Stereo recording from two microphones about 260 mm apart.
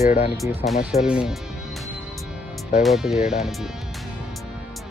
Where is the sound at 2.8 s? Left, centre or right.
Centre.